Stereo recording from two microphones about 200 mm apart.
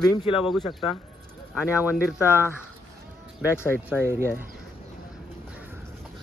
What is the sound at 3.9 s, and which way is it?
Speech, 10° right (ahead or behind).